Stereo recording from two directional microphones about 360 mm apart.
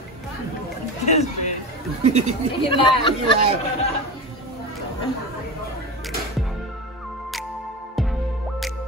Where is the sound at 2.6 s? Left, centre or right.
Centre.